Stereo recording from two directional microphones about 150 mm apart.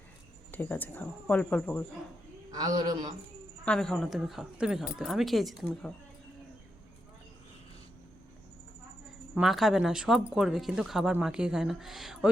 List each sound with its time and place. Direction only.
0.5 s speech: 10° left (ahead or behind)
2.5 s a man's voice: 25° right (ahead or behind)
3.7 s speech: 5° left (ahead or behind)
9.3 s speech: centre (ahead or behind)